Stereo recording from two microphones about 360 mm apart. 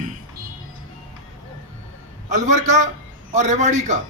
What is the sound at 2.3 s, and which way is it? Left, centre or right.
A man's voice, centre.